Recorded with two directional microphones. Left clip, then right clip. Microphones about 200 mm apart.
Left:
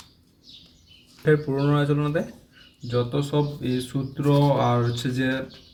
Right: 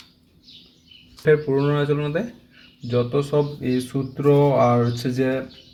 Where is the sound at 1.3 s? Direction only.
35° right (ahead or behind).